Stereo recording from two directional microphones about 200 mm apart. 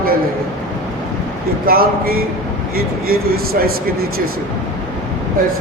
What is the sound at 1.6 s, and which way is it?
A man's voice, 50° right (ahead or behind).